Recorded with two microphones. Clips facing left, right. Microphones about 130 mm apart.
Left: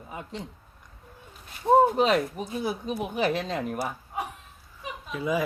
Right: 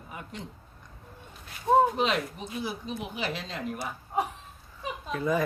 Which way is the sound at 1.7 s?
20° left (ahead or behind).